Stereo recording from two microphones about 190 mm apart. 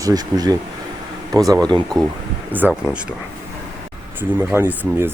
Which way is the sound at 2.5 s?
5° right (ahead or behind).